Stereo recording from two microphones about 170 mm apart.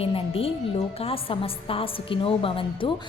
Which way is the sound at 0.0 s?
35° left (ahead or behind).